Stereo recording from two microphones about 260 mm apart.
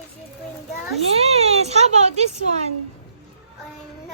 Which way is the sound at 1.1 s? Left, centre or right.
Right.